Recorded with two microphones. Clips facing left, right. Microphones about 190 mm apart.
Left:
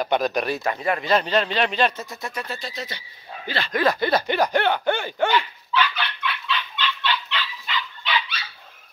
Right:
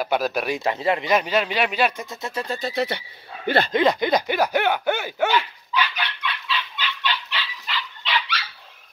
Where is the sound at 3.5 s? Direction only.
50° right (ahead or behind).